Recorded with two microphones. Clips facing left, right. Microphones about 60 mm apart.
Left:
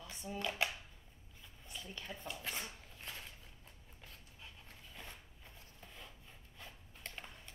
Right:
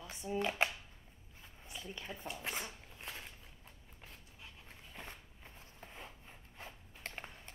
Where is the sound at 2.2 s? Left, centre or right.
Right.